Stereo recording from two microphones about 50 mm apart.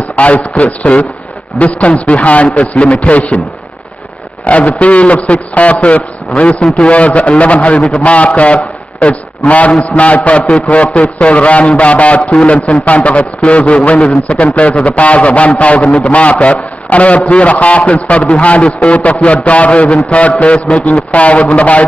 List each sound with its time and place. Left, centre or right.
0.1 s a man's voice: left
4.5 s a man's voice: left
20.5 s a sound: centre
20.8 s a man's voice: left